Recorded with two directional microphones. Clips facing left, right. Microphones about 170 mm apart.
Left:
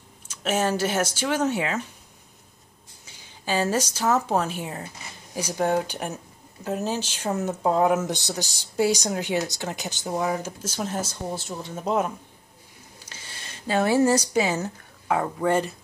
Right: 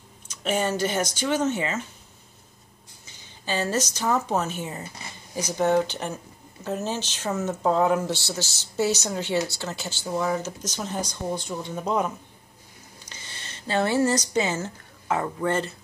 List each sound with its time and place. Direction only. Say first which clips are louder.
0.4 s speech: left 1 dB; 5° left (ahead or behind)
3.4 s speech: left 2 dB; 10° left (ahead or behind)
8.1 s speech: even; 15° left (ahead or behind)
10.3 s speech: right 1 dB; 10° left (ahead or behind)
15.4 s speech: left 4 dB; 10° left (ahead or behind)